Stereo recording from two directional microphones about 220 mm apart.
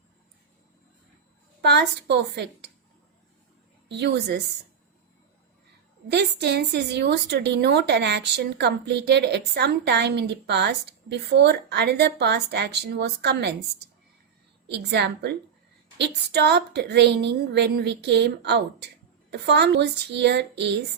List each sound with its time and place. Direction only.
1.6 s speech: 50° right (ahead or behind)
3.8 s speech: 50° right (ahead or behind)
6.1 s speech: 50° right (ahead or behind)
14.7 s speech: 50° right (ahead or behind)